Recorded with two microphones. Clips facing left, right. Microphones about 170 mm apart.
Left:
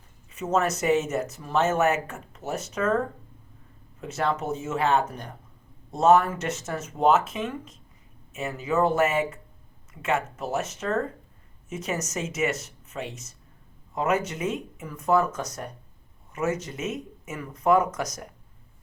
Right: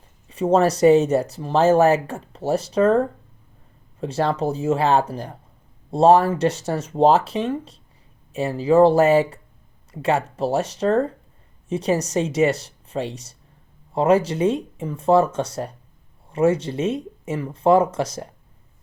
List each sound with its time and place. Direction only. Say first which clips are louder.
0.3 s speech: right 8 dB; 30° right (ahead or behind)
4.0 s speech: right 6 dB; 30° right (ahead or behind)